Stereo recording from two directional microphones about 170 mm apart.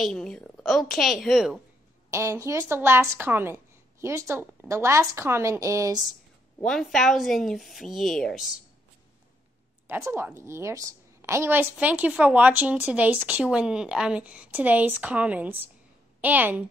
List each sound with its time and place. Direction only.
0.0 s a woman's voice: 5° left (ahead or behind)
2.0 s a woman's voice: 15° right (ahead or behind)
6.6 s a woman's voice: centre (ahead or behind)
9.8 s a woman's voice: 15° right (ahead or behind)